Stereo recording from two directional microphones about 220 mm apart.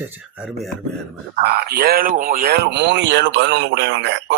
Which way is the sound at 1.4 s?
45° right (ahead or behind).